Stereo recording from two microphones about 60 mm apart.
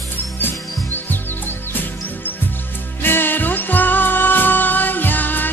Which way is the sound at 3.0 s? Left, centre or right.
Left.